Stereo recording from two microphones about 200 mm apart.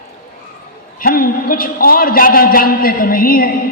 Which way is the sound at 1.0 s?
45° left (ahead or behind).